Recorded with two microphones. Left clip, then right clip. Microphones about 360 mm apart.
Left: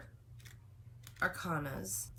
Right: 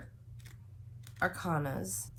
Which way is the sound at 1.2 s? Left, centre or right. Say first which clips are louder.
Right 3 dB; centre.